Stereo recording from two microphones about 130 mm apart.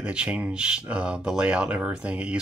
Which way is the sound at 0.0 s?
10° right (ahead or behind).